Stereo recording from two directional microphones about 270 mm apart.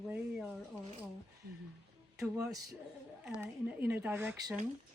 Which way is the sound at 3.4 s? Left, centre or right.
Centre.